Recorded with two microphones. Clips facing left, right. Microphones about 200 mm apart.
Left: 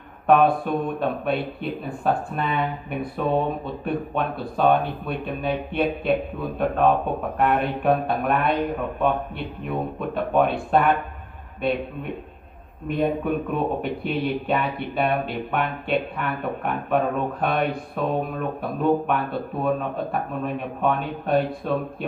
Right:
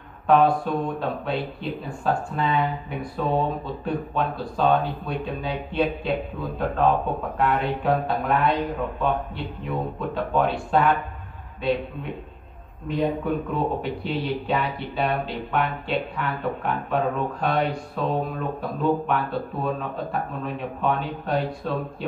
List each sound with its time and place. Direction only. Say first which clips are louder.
0.3 s speech: left 1 dB; 55° left (ahead or behind)
12.8 s speech: left 1 dB; 55° left (ahead or behind)